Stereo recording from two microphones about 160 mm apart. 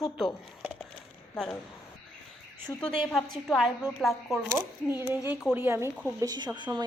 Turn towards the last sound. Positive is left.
turn(degrees=-25)  # may be behind; listen again after turning